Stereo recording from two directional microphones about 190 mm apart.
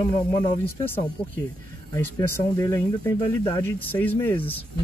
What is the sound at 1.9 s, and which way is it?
Speech, 15° left (ahead or behind).